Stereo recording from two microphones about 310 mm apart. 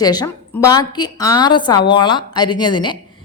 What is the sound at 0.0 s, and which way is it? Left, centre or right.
A woman's voice, centre.